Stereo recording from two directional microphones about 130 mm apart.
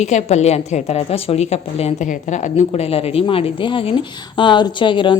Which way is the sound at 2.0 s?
75° left (ahead or behind).